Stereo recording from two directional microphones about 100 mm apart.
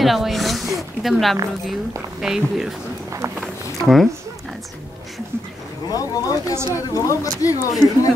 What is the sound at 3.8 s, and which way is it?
Speech, 5° left (ahead or behind).